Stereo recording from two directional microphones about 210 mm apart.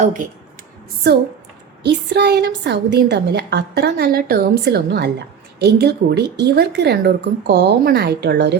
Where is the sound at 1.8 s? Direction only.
55° right (ahead or behind).